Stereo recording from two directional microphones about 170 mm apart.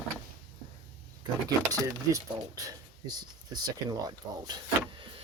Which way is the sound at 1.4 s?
20° right (ahead or behind).